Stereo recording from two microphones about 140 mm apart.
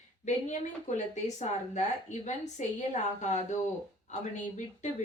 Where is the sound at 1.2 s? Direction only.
55° left (ahead or behind).